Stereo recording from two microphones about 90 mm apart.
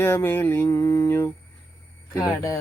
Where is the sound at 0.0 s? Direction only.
25° left (ahead or behind).